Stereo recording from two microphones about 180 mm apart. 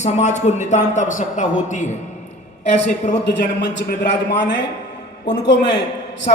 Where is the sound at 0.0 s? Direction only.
40° left (ahead or behind).